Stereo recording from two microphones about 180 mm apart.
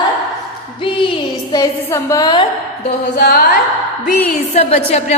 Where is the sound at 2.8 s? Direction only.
55° left (ahead or behind).